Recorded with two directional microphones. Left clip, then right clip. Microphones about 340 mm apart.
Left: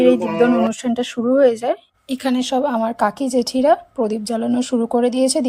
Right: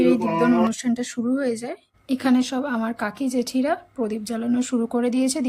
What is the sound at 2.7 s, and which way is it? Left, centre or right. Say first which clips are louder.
Speech: left 8 dB; left.